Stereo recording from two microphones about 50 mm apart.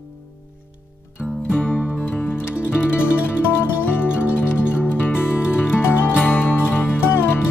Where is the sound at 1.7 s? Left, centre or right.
Left.